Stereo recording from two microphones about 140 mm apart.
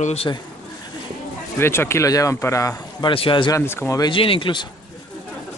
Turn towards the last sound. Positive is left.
turn(degrees=35)  # may be behind; listen again after turning